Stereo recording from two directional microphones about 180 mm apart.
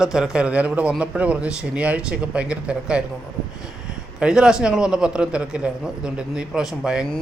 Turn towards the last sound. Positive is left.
turn(degrees=0)  # may be behind; listen again after turning